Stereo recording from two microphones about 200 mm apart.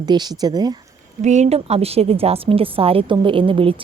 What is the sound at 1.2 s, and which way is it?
A woman's voice, 35° right (ahead or behind).